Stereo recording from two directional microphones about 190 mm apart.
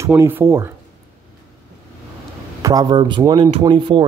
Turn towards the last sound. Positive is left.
turn(degrees=-25)  # may be behind; listen again after turning